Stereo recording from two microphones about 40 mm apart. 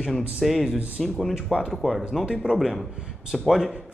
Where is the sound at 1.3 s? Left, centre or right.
Centre.